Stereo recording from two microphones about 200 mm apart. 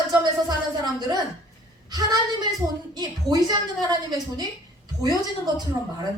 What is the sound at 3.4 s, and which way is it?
A woman's voice, 20° right (ahead or behind).